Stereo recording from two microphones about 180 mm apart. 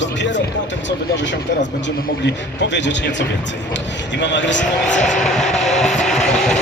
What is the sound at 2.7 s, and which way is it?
A man's voice, 80° left.